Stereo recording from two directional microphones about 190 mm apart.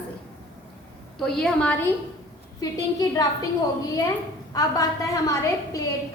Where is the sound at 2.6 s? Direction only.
20° left (ahead or behind).